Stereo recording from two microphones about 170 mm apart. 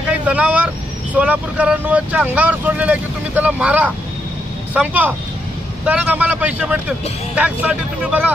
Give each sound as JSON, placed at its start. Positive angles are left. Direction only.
{"t": 0.1, "sound": "vehicle", "side_deg": -10}
{"t": 1.1, "sound": "speech", "side_deg": -10}